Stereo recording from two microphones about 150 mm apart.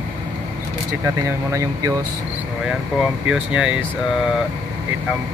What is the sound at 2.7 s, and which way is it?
Speech, 5° right (ahead or behind).